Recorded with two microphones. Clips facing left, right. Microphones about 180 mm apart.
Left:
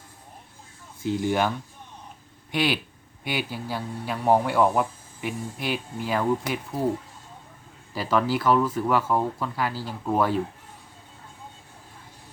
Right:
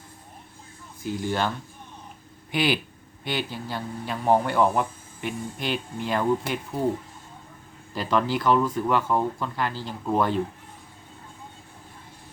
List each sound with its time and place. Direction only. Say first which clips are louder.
1.0 s speech: left 3 dB; 20° left (ahead or behind)
2.5 s speech: right 1 dB; centre (ahead or behind)
7.9 s speech: left 1 dB; 5° left (ahead or behind)